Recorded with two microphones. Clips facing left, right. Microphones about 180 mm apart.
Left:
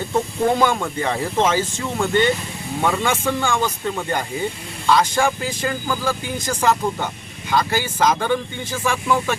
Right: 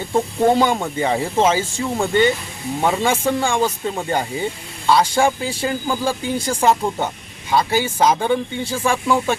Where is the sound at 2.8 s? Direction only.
30° right (ahead or behind).